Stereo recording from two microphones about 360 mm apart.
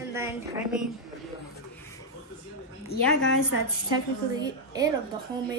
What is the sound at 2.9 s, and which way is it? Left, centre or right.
Speech, left.